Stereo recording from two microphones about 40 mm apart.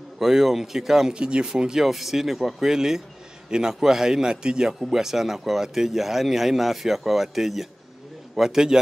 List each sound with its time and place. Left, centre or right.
0.2 s speech: centre
4.7 s speech: centre